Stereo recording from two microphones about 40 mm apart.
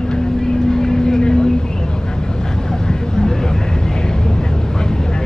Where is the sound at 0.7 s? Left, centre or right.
Centre.